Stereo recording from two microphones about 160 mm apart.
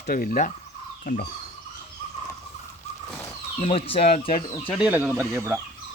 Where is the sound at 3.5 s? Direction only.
40° left (ahead or behind).